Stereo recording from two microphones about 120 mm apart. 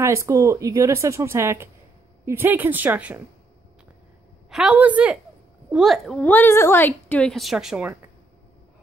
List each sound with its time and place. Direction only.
0.0 s speech: 25° right (ahead or behind)
4.5 s speech: 5° right (ahead or behind)
6.1 s a woman's voice: 15° left (ahead or behind); by 7.9 s 5° right (ahead or behind)